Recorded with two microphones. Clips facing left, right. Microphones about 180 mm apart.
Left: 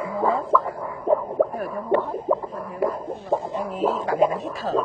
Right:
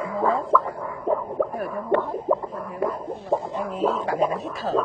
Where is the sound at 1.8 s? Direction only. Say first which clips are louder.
Left 1 dB; 15° left (ahead or behind).